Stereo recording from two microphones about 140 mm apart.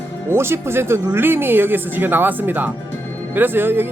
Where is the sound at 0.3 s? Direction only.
15° right (ahead or behind).